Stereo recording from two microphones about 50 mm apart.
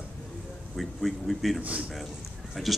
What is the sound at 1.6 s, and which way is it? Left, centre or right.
Speech, right.